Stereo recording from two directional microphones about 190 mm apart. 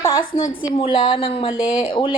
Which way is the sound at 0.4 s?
45° left (ahead or behind).